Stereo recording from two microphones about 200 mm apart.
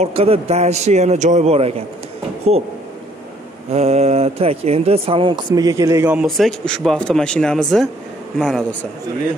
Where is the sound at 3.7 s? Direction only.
30° right (ahead or behind); by 6.2 s 10° right (ahead or behind).